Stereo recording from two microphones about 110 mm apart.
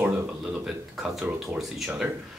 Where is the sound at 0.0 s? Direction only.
10° right (ahead or behind).